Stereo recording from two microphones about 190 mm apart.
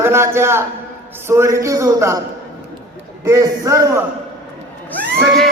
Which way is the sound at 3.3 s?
15° right (ahead or behind).